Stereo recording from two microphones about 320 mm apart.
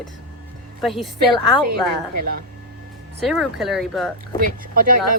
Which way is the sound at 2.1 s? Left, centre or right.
Right.